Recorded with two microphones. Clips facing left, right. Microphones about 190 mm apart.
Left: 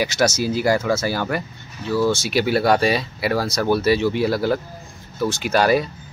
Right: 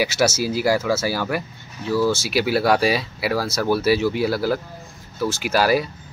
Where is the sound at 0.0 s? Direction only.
5° right (ahead or behind).